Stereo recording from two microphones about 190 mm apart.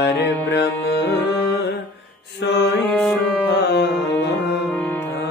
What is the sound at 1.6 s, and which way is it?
Mantra, 70° left (ahead or behind).